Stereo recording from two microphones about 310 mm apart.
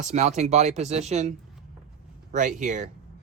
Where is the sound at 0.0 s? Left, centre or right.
Right.